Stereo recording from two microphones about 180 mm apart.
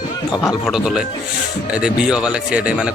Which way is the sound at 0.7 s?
Centre (ahead or behind).